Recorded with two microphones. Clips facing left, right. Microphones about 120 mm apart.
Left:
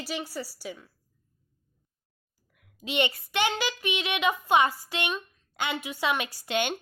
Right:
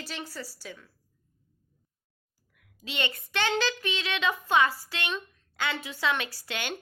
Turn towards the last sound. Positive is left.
turn(degrees=20)  # may be behind; listen again after turning